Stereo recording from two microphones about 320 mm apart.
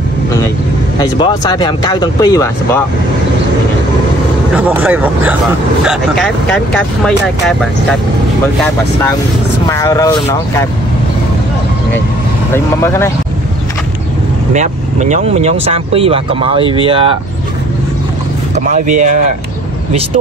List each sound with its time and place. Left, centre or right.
0.9 s speech: centre
4.6 s speech: centre
9.7 s speech: centre
12.5 s speech: centre
14.5 s speech: right
18.5 s speech: right